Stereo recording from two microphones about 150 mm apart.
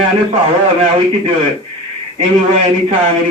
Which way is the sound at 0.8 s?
40° right (ahead or behind).